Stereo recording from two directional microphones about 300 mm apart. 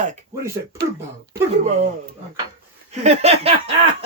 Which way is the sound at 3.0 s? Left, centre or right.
Right.